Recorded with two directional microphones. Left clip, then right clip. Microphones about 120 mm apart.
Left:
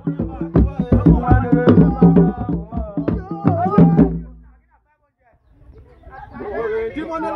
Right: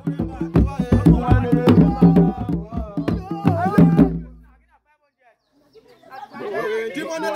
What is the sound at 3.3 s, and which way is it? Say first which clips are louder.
Music: even; 15° left (ahead or behind).